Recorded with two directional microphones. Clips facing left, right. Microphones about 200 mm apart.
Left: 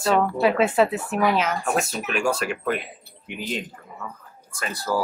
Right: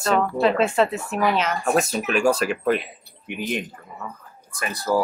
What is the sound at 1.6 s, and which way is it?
Speech, 40° right (ahead or behind).